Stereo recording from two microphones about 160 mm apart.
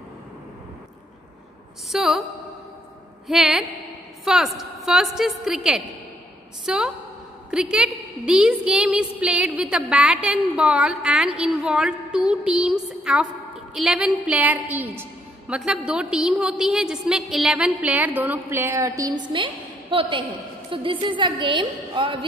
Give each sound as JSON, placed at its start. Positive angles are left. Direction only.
{"t": 1.9, "sound": "a woman's voice", "side_deg": 0}
{"t": 3.3, "sound": "a woman's voice", "side_deg": -5}
{"t": 19.3, "sound": "a woman's voice", "side_deg": -30}